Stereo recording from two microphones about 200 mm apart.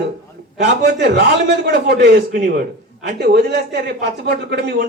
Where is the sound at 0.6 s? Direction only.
55° right (ahead or behind).